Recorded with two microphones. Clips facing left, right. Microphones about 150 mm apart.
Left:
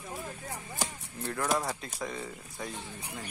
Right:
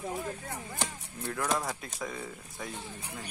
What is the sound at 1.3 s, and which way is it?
Speech, 5° left (ahead or behind).